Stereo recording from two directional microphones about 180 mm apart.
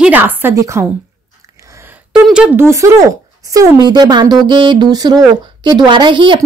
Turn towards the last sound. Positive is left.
turn(degrees=-25)  # may be behind; listen again after turning